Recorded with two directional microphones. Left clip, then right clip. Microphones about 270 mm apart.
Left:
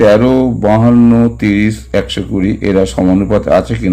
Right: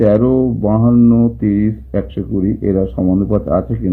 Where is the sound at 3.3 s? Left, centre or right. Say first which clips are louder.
Left 8 dB; left.